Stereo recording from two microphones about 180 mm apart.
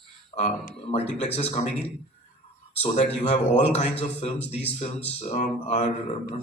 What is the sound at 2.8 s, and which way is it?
A man's voice, 35° left (ahead or behind).